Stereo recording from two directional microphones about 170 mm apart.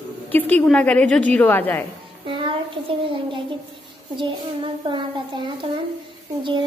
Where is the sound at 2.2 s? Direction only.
30° right (ahead or behind).